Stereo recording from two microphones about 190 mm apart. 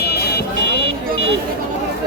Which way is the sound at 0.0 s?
60° left (ahead or behind).